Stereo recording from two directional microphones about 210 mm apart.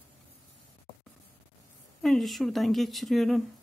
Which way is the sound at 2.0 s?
Centre (ahead or behind).